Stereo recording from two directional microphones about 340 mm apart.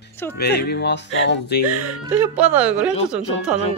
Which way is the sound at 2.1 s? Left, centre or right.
Centre.